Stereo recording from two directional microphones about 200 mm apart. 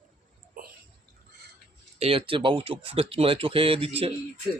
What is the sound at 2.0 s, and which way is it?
Speech, 30° right (ahead or behind).